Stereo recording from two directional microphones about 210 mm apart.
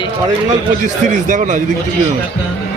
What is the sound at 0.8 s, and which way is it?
Speech, 40° right (ahead or behind).